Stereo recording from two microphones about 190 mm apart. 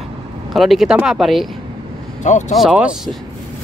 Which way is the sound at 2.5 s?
5° right (ahead or behind).